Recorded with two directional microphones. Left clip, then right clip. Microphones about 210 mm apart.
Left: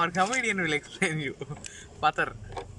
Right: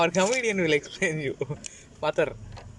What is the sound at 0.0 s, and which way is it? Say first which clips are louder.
A man's voice: right 3 dB; 15° right (ahead or behind).